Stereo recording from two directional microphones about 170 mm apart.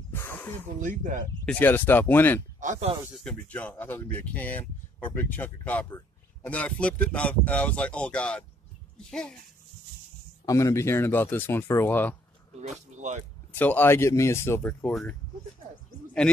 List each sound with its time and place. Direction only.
0.1 s a sound: 15° left (ahead or behind)
0.7 s speech: 50° right (ahead or behind)
1.4 s speech: 10° left (ahead or behind)
2.6 s speech: 45° right (ahead or behind)
3.3 s a child's voice: 10° left (ahead or behind)
10.4 s speech: 20° left (ahead or behind)
13.5 s speech: 10° left (ahead or behind)